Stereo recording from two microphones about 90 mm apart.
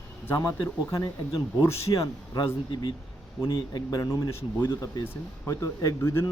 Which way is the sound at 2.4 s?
65° left (ahead or behind).